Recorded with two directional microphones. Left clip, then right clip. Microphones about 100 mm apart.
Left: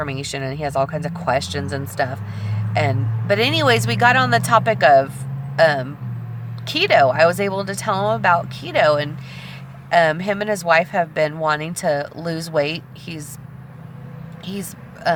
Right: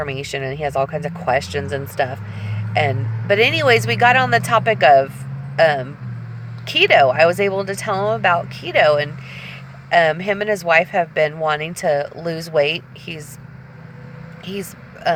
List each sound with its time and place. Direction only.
0.0 s speech: 20° left (ahead or behind)
9.9 s speech: 20° left (ahead or behind)
14.5 s a sound: 15° left (ahead or behind)